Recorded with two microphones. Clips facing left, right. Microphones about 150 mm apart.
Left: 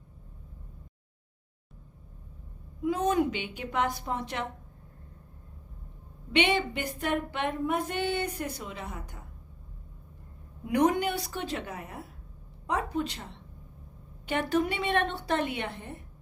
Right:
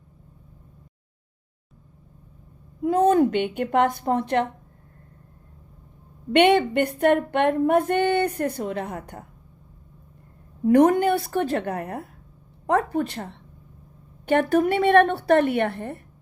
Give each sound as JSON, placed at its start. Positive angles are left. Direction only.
{"t": 2.8, "sound": "speech", "side_deg": -55}
{"t": 6.3, "sound": "speech", "side_deg": -55}
{"t": 10.7, "sound": "a woman's voice", "side_deg": -50}